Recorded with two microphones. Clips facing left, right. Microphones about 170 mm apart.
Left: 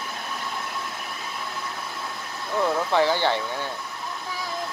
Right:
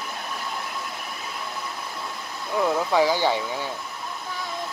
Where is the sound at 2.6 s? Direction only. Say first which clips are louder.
Right 1 dB; 10° right (ahead or behind).